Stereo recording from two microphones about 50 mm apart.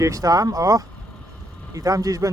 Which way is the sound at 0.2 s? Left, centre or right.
Right.